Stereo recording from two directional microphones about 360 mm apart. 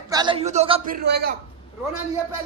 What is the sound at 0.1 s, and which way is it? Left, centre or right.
A man's voice, centre.